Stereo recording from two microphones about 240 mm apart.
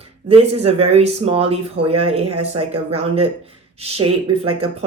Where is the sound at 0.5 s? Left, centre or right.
Right.